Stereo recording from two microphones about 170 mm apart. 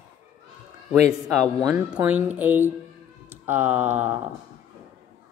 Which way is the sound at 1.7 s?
10° right (ahead or behind).